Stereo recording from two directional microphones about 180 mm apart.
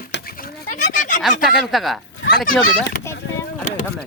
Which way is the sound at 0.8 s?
45° left (ahead or behind).